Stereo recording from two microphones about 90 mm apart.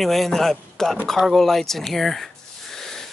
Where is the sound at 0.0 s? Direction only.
Centre (ahead or behind).